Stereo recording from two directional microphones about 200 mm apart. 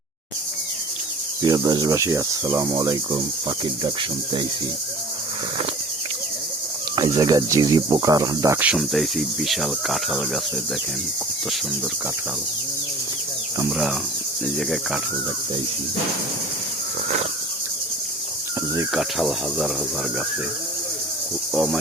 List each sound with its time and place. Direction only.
1.4 s speech: 20° right (ahead or behind)
3.6 s cricket: 25° right (ahead or behind)
6.9 s speech: 20° right (ahead or behind); by 10.4 s centre (ahead or behind)
13.7 s speech: 5° right (ahead or behind)
18.9 s speech: centre (ahead or behind)
21.5 s cricket: 5° right (ahead or behind)